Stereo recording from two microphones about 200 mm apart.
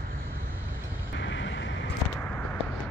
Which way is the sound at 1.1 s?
70° left (ahead or behind).